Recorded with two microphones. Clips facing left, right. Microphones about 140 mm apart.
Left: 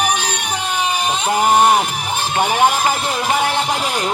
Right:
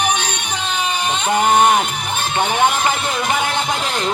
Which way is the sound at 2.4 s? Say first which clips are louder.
Left 1 dB; 10° left (ahead or behind).